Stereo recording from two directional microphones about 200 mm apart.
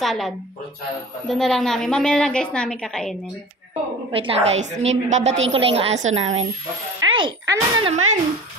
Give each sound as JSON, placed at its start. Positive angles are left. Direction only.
{"t": 0.0, "sound": "a woman's voice", "side_deg": 0}
{"t": 3.7, "sound": "a woman's voice", "side_deg": -25}
{"t": 7.0, "sound": "a child's voice", "side_deg": -25}